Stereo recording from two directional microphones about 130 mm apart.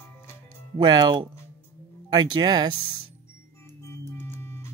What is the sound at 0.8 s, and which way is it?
Speech, 35° right (ahead or behind).